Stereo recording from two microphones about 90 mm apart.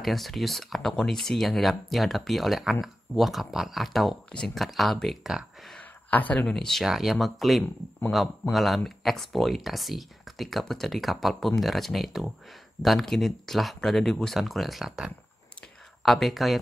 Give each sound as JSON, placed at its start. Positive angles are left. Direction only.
{"t": 0.0, "sound": "speech", "side_deg": 0}
{"t": 5.8, "sound": "a sound", "side_deg": 20}
{"t": 6.4, "sound": "speech", "side_deg": 5}